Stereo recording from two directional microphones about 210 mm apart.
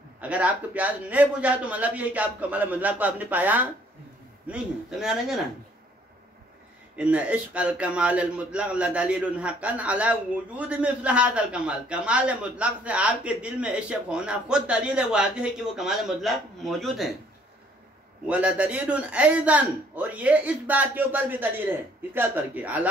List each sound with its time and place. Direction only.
0.2 s a man's voice: 5° right (ahead or behind)
7.0 s a man's voice: 5° right (ahead or behind)
18.2 s a man's voice: 5° right (ahead or behind)